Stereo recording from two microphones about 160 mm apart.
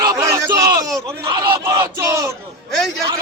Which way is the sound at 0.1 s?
20° right (ahead or behind).